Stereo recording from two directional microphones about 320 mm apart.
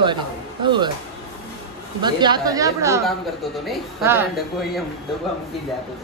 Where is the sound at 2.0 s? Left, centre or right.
Centre.